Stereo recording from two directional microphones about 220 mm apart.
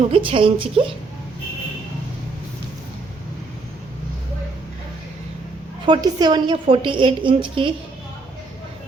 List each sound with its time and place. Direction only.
0.1 s a woman's voice: 25° right (ahead or behind)
5.8 s a woman's voice: 20° right (ahead or behind)